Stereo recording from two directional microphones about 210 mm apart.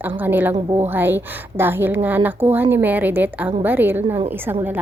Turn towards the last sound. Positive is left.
turn(degrees=-10)  # may be behind; listen again after turning